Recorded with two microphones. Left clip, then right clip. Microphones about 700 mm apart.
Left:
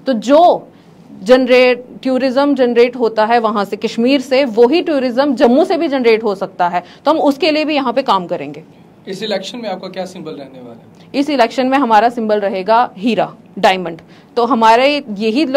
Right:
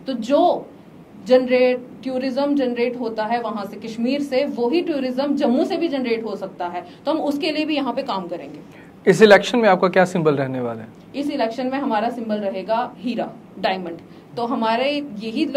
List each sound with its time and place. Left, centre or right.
0.0 s a woman's voice: left
9.0 s speech: right
11.1 s a woman's voice: left